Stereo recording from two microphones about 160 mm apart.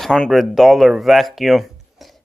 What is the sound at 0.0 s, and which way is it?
Speech, 5° left (ahead or behind).